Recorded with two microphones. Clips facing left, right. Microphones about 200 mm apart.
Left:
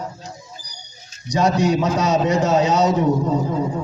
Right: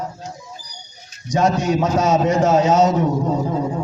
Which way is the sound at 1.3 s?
50° right (ahead or behind).